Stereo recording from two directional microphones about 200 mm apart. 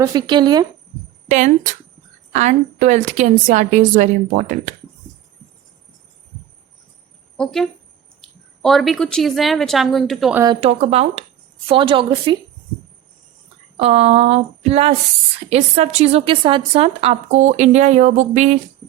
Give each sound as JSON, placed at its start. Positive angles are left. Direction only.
{"t": 0.0, "sound": "a woman's voice", "side_deg": -20}
{"t": 1.3, "sound": "a woman's voice", "side_deg": -40}
{"t": 7.3, "sound": "a woman's voice", "side_deg": 5}
{"t": 10.4, "sound": "a woman's voice", "side_deg": -25}
{"t": 13.7, "sound": "a woman's voice", "side_deg": -30}